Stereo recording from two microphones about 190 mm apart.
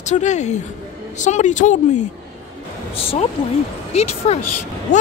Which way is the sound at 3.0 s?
30° left (ahead or behind).